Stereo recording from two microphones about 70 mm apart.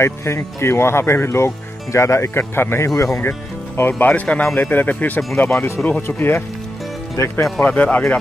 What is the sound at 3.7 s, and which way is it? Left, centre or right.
Speech, left.